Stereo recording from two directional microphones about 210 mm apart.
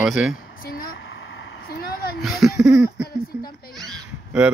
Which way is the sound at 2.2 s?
Centre (ahead or behind).